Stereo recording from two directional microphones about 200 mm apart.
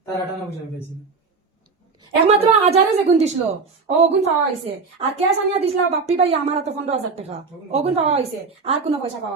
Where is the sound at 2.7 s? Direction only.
30° right (ahead or behind).